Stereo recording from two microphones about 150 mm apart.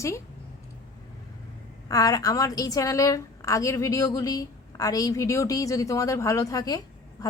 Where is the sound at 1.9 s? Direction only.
25° left (ahead or behind).